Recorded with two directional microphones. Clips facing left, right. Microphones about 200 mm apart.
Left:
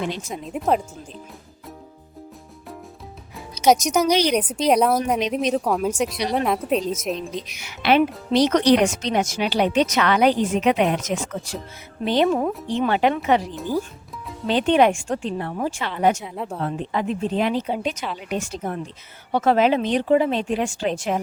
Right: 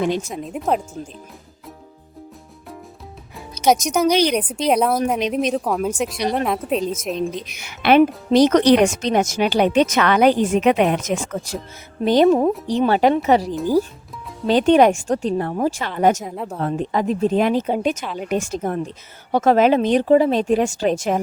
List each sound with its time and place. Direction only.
0.0 s speech: 45° right (ahead or behind)
0.3 s a woman's voice: centre (ahead or behind)
3.7 s a woman's voice: centre (ahead or behind)
4.0 s speech: 55° right (ahead or behind)
4.4 s a woman's voice: centre (ahead or behind)
7.2 s a woman's voice: 55° right (ahead or behind)
16.3 s a woman's voice: centre (ahead or behind)
16.6 s speech: 45° right (ahead or behind)